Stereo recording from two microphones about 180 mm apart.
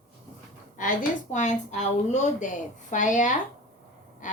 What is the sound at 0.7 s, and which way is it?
A woman's voice, 45° left (ahead or behind).